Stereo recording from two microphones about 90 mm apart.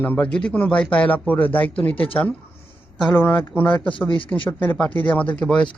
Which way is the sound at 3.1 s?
20° left (ahead or behind).